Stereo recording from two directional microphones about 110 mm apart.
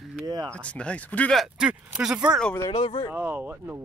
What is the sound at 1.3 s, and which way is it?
Speech, 10° right (ahead or behind).